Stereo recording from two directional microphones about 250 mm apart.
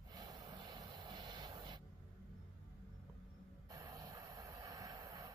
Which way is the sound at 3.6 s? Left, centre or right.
Centre.